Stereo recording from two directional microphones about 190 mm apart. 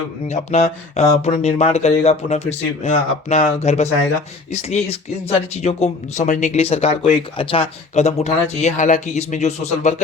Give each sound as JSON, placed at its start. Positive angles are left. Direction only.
{"t": 0.3, "sound": "speech", "side_deg": 35}